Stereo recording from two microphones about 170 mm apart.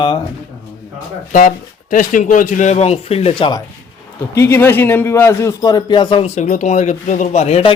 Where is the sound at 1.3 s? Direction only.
50° left (ahead or behind); by 3.6 s 30° left (ahead or behind).